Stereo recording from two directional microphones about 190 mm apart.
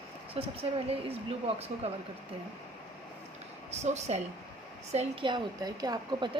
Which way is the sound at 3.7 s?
35° right (ahead or behind).